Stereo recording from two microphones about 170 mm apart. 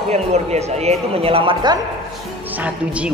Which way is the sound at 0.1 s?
40° right (ahead or behind).